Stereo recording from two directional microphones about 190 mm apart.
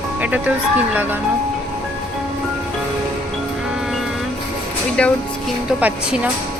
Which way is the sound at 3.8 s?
Centre (ahead or behind).